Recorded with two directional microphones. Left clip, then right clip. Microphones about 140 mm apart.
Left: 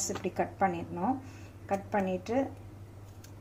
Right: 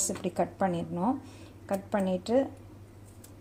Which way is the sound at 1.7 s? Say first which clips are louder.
Even; 50° right (ahead or behind).